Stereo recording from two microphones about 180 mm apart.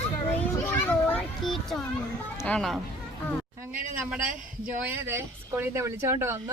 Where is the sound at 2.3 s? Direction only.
15° left (ahead or behind).